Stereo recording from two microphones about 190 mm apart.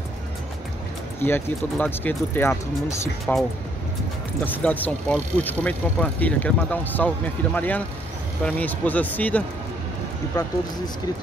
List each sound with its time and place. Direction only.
1.2 s speech: 10° left (ahead or behind)
4.6 s speech: 10° left (ahead or behind)
10.3 s speech: 20° left (ahead or behind)